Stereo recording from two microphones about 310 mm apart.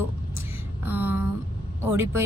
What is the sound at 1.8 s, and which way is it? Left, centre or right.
Speech, centre.